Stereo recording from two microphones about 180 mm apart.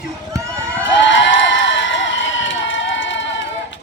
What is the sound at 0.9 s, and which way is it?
Crowd, 90° left.